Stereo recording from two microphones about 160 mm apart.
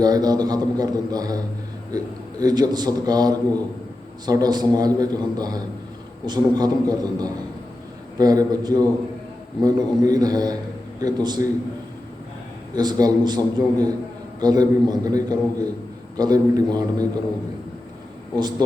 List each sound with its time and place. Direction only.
0.0 s a man's voice: 25° right (ahead or behind)
12.7 s a man's voice: 25° right (ahead or behind)